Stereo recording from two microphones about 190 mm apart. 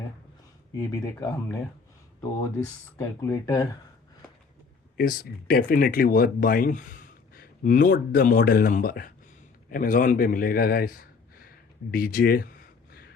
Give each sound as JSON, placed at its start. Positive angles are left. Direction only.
{"t": 0.9, "sound": "speech", "side_deg": 20}
{"t": 3.0, "sound": "speech", "side_deg": 15}
{"t": 4.9, "sound": "a man's voice", "side_deg": 50}